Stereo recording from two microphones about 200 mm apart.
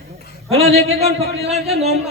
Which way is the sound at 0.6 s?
30° right (ahead or behind).